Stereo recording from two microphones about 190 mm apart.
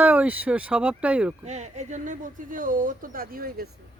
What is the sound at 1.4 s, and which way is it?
Speech, 35° right (ahead or behind).